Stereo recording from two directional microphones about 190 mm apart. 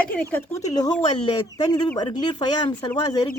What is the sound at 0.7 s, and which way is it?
Speech, 20° left (ahead or behind).